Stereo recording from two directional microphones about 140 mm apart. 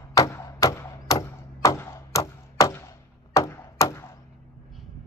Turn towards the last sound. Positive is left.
turn(degrees=20)  # may be behind; listen again after turning